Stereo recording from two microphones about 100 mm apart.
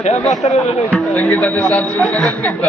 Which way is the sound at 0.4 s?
90° left.